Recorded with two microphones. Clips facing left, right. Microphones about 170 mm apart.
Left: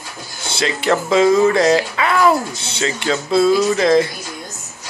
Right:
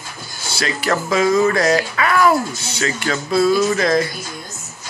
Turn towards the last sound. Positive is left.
turn(degrees=25)  # may be behind; listen again after turning